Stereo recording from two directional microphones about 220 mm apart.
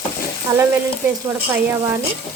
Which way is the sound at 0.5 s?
15° right (ahead or behind).